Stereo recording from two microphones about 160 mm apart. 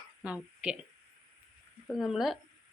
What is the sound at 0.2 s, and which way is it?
Speech, 10° right (ahead or behind).